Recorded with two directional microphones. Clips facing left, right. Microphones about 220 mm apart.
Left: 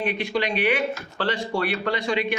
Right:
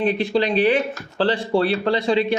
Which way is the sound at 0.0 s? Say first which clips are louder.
Right 6 dB; 30° right (ahead or behind).